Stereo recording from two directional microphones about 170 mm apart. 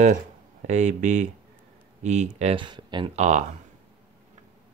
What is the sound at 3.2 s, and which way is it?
Speech, 45° right (ahead or behind).